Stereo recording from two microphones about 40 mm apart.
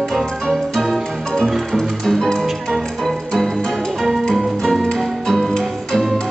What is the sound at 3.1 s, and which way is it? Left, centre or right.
Organ, centre.